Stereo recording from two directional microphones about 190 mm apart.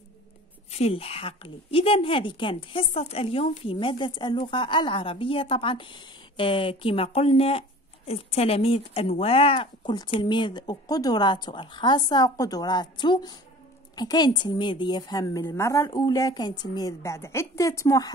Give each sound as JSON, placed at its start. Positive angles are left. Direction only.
{"t": 0.7, "sound": "a woman's voice", "side_deg": 35}